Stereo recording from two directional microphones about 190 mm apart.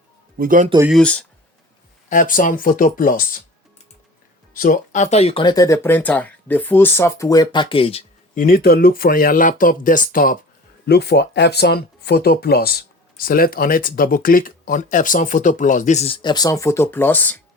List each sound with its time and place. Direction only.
0.3 s speech: 45° right (ahead or behind)
0.9 s speech: 5° left (ahead or behind)
2.0 s speech: 45° left (ahead or behind)
4.5 s speech: 45° left (ahead or behind); by 8.0 s 30° left (ahead or behind)
8.4 s speech: 50° left (ahead or behind)
10.8 s speech: 60° left (ahead or behind); by 17.4 s 10° left (ahead or behind)